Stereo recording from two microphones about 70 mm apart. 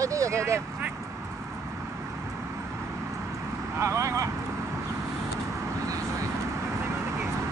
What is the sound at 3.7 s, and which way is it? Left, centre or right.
Vehicle, right.